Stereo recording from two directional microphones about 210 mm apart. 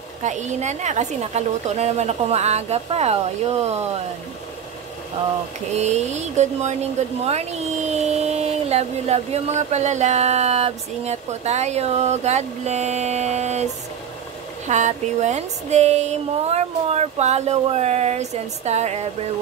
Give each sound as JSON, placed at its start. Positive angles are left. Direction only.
{"t": 0.2, "sound": "speech", "side_deg": -35}
{"t": 5.8, "sound": "speech", "side_deg": -30}
{"t": 14.7, "sound": "speech", "side_deg": -35}